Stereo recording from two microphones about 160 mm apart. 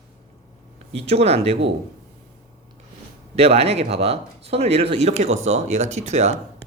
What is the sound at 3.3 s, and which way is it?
Speech, 40° right (ahead or behind).